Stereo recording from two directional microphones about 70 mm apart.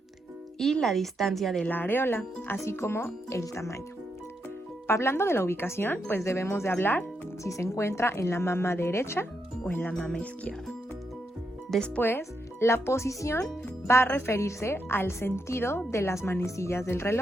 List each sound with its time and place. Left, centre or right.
0.6 s a woman's voice: centre
1.6 s speech: left
4.9 s speech: left
7.4 s speech: left
9.6 s speech: left
9.9 s speech: centre
11.9 s speech: left